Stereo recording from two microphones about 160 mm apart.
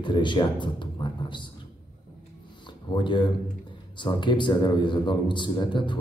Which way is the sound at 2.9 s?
30° left (ahead or behind).